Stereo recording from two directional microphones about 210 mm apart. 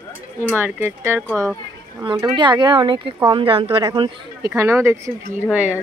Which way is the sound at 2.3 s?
20° right (ahead or behind).